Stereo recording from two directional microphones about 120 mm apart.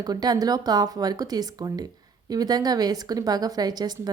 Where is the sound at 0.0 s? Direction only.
35° right (ahead or behind).